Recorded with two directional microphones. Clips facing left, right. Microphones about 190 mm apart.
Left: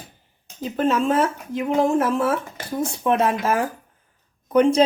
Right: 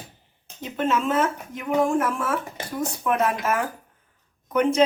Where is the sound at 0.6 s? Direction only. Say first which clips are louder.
Left 4 dB; 35° left (ahead or behind).